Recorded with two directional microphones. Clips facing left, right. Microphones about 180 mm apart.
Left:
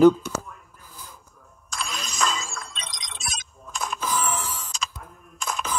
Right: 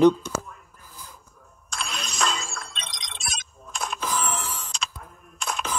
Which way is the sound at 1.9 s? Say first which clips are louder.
Even; centre (ahead or behind).